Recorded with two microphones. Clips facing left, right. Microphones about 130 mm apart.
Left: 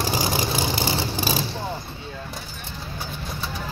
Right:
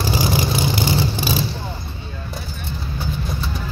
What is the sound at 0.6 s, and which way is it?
Vehicle, 30° left (ahead or behind).